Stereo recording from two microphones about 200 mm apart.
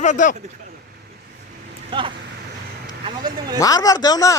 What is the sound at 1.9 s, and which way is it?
Speech, 25° right (ahead or behind).